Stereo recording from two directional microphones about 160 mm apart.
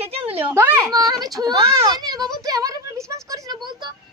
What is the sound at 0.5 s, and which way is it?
A woman's voice, 15° right (ahead or behind).